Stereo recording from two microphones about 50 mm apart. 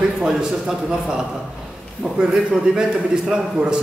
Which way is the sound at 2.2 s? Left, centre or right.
Centre.